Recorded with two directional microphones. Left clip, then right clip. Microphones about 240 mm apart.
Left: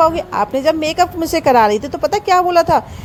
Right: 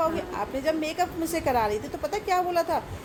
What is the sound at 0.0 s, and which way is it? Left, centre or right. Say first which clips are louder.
A woman's voice: left 13 dB; left.